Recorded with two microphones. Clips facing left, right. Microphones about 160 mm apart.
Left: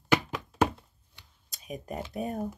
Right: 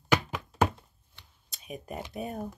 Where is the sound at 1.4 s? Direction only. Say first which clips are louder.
Left 2 dB; 40° left (ahead or behind).